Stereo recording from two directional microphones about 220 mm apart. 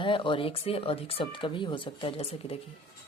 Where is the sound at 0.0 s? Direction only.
20° left (ahead or behind).